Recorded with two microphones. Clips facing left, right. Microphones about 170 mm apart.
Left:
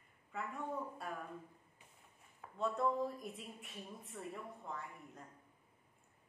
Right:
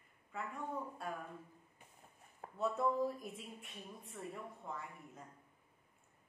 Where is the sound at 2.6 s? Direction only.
5° right (ahead or behind).